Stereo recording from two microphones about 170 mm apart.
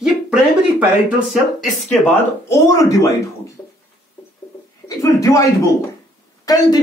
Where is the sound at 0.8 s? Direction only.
Centre (ahead or behind).